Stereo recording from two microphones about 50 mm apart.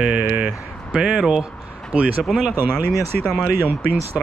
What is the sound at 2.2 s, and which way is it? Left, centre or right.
Speech, centre.